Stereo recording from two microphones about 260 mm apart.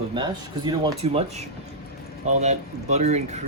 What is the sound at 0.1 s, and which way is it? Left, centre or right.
Speech, centre.